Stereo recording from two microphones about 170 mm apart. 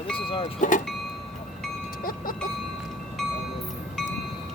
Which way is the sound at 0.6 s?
50° left (ahead or behind).